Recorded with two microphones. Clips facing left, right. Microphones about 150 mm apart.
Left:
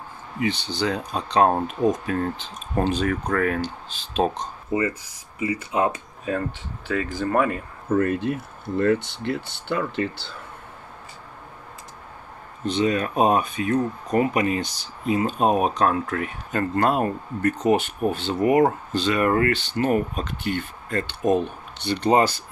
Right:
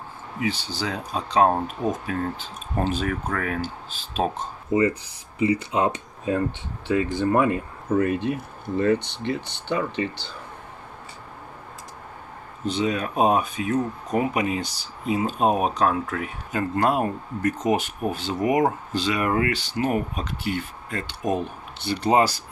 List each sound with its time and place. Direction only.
0.4 s speech: 5° right (ahead or behind)
4.7 s speech: 30° left (ahead or behind)
5.4 s speech: 30° right (ahead or behind)
7.9 s speech: centre (ahead or behind)
12.6 s speech: 5° right (ahead or behind)